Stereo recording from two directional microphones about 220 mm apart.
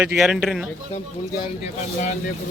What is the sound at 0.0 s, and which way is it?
Speech, 5° right (ahead or behind).